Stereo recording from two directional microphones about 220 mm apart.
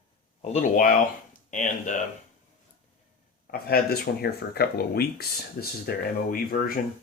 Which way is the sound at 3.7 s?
45° left (ahead or behind).